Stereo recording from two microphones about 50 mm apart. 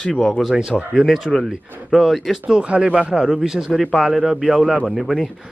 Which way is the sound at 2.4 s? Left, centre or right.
Right.